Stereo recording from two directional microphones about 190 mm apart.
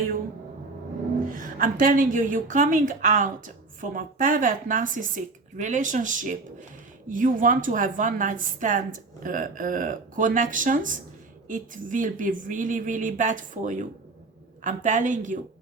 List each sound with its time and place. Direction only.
1.4 s a woman's voice: 45° right (ahead or behind)